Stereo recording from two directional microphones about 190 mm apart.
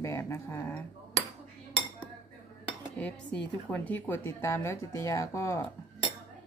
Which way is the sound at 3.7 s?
10° left (ahead or behind).